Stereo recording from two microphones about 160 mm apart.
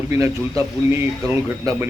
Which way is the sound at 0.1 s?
20° right (ahead or behind).